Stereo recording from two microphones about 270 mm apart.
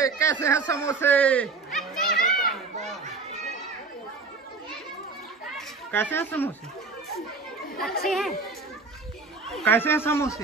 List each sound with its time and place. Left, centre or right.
0.0 s speech: centre
0.7 s chatter: centre
5.9 s speech: centre
8.0 s speech: centre
9.5 s speech: centre